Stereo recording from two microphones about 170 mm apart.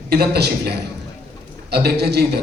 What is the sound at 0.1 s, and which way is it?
A man's voice, 70° right (ahead or behind).